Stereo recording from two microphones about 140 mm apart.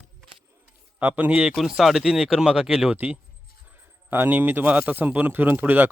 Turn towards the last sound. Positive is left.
turn(degrees=-15)  # may be behind; listen again after turning